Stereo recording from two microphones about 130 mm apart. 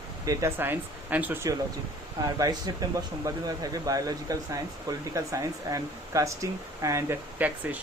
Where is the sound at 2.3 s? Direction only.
30° right (ahead or behind).